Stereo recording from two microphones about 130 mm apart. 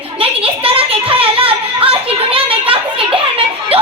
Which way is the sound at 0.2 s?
45° right (ahead or behind).